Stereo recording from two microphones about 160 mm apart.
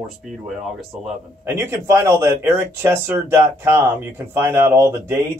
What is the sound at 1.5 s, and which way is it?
Speech, 15° right (ahead or behind).